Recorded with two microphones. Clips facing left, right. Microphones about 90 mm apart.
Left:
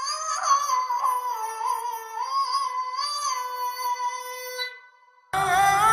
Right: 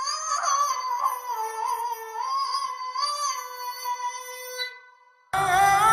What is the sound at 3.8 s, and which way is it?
Music, 20° left (ahead or behind).